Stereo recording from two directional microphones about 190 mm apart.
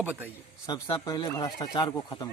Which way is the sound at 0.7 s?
25° left (ahead or behind).